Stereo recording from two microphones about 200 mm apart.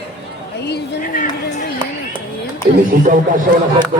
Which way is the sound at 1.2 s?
35° left (ahead or behind).